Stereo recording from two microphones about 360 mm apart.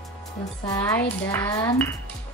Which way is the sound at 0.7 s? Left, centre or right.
Centre.